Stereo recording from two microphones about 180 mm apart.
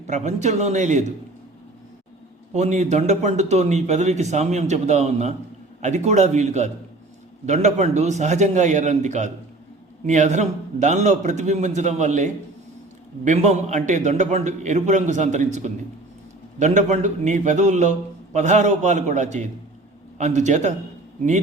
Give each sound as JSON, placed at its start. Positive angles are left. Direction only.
{"t": 0.1, "sound": "a man's voice", "side_deg": -40}
{"t": 2.5, "sound": "a man's voice", "side_deg": -40}